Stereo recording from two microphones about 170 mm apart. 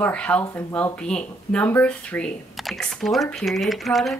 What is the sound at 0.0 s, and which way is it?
Speech, 5° left (ahead or behind).